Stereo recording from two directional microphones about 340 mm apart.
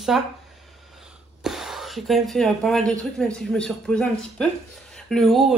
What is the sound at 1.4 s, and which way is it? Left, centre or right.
A woman's voice, centre.